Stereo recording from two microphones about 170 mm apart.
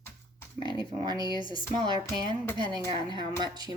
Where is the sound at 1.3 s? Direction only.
30° left (ahead or behind).